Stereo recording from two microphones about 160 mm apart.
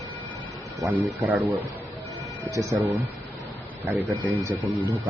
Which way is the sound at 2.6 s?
15° right (ahead or behind).